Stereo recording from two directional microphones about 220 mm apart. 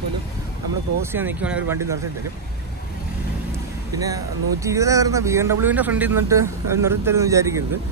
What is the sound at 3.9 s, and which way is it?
Speech, 15° right (ahead or behind).